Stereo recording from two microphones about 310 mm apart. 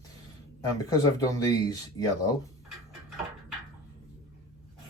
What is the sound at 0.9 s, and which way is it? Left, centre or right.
Speech, centre.